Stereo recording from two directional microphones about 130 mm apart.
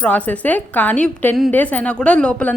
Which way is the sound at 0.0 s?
10° left (ahead or behind).